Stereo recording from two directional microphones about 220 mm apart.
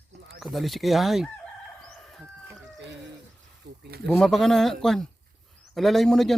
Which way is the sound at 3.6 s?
50° right (ahead or behind).